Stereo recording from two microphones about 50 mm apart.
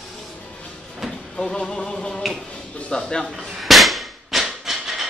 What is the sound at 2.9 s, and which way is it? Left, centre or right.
Speech, centre.